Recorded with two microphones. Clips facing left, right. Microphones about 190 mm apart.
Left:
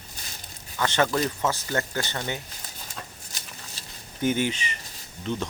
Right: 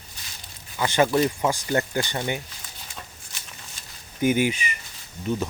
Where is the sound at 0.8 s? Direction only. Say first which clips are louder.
Right 4 dB; 10° right (ahead or behind).